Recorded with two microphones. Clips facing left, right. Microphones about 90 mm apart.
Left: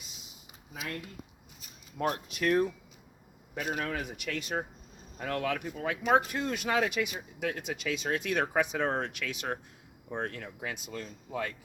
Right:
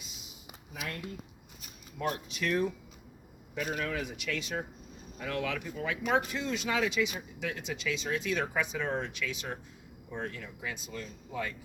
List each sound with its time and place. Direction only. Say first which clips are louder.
2.0 s speech: left 2 dB; 45° left (ahead or behind)